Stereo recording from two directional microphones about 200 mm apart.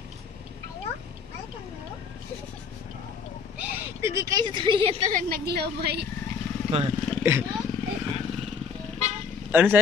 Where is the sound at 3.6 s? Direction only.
10° right (ahead or behind).